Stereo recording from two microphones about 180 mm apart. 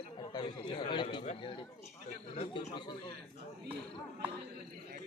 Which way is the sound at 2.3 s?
35° left (ahead or behind).